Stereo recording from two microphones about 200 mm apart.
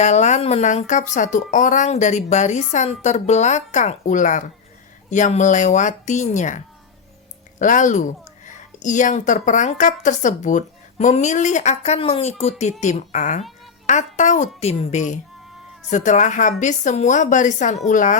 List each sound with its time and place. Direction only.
0.0 s speech: 35° left (ahead or behind)
7.6 s speech: 40° left (ahead or behind)